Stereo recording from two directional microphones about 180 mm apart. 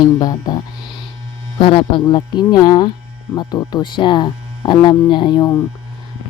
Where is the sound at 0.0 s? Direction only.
20° left (ahead or behind).